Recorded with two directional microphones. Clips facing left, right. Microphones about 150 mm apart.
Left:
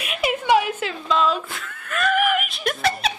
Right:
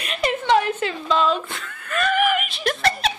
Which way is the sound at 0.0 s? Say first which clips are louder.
Even; 5° left (ahead or behind).